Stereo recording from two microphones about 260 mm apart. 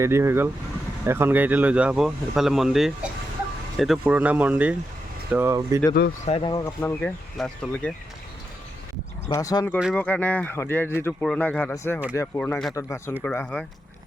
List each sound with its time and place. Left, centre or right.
0.0 s speech: centre
6.2 s speech: left
6.5 s speech: centre
9.3 s speech: centre
9.7 s speech: centre